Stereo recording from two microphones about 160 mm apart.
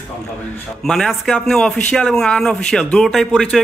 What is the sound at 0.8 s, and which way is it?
A man's voice, centre (ahead or behind).